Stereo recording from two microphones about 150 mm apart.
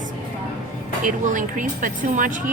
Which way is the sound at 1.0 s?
60° right (ahead or behind).